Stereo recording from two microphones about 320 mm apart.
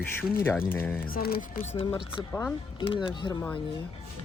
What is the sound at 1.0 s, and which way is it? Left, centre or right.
Speech, left.